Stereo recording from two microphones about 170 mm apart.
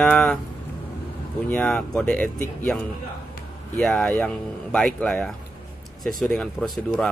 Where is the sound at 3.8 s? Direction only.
5° left (ahead or behind).